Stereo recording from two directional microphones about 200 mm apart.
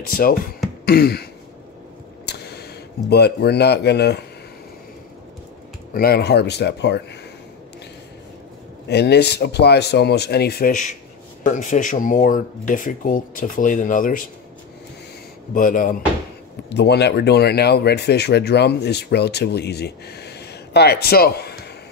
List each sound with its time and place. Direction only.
0.1 s speech: 45° left (ahead or behind)
2.2 s speech: 55° left (ahead or behind)
5.9 s speech: 50° left (ahead or behind)
8.8 s speech: 55° left (ahead or behind)
10.7 s speech: 40° left (ahead or behind)
15.5 s speech: 45° left (ahead or behind)
16.6 s speech: 55° left (ahead or behind)